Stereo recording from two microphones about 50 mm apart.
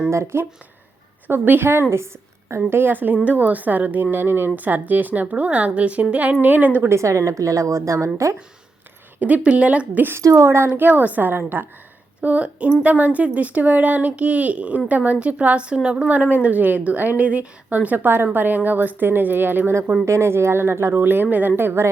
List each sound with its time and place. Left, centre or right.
0.1 s speech: right
1.3 s speech: right
4.5 s a woman's voice: right
6.8 s a woman's voice: right
9.2 s a woman's voice: right
10.2 s a woman's voice: right
10.8 s speech: right
12.2 s a woman's voice: right
20.1 s speech: right
20.9 s speech: right